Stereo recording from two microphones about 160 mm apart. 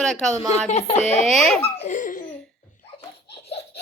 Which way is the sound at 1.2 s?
Centre (ahead or behind).